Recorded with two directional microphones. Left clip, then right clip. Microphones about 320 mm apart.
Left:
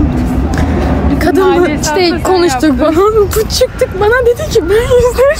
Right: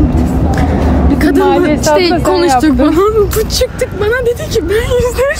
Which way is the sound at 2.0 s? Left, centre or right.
Centre.